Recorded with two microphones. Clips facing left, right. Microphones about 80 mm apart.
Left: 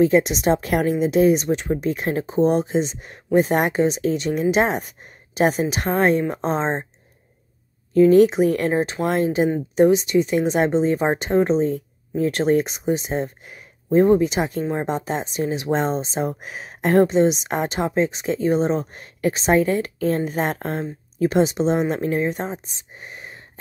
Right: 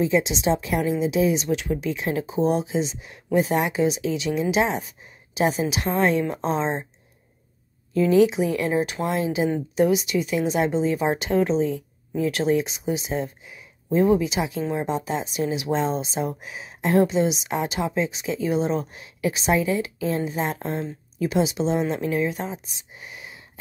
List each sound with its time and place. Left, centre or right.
0.0 s a woman's voice: left
7.9 s a woman's voice: left